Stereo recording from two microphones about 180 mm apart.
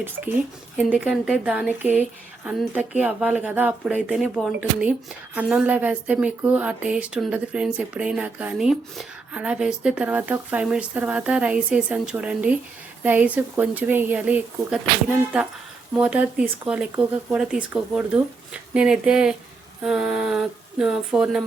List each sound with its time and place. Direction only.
0.8 s a woman's voice: 5° right (ahead or behind)